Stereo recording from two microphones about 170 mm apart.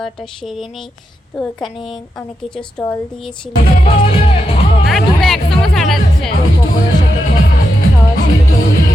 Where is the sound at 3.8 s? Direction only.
35° left (ahead or behind).